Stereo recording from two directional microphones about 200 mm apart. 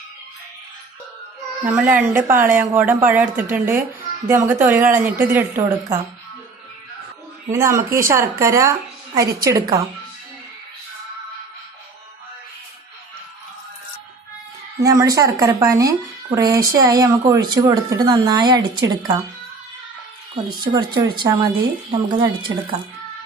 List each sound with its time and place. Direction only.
1.6 s speech: 5° right (ahead or behind)
7.5 s a woman's voice: 15° right (ahead or behind)
14.8 s a woman's voice: 15° right (ahead or behind)
20.5 s a woman's voice: 20° right (ahead or behind)